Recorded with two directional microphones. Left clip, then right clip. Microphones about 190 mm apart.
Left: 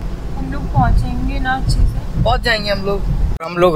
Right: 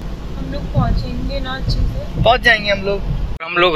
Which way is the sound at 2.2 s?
5° right (ahead or behind).